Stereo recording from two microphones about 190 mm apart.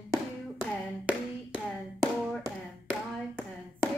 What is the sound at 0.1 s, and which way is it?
Hands, 15° right (ahead or behind).